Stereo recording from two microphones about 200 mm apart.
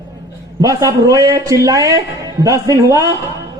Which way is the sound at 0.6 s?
15° right (ahead or behind).